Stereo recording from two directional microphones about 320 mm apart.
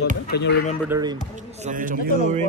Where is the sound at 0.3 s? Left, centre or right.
Left.